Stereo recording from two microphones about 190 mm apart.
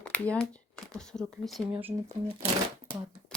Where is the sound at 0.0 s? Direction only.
5° left (ahead or behind).